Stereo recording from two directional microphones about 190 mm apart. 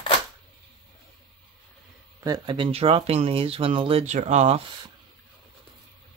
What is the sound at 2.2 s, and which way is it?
Speech, 20° right (ahead or behind).